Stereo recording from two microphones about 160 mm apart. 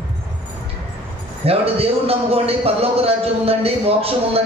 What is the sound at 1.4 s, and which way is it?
A man's voice, 40° right (ahead or behind).